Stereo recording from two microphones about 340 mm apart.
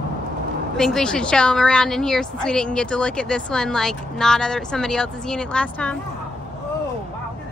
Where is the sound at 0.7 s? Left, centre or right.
Centre.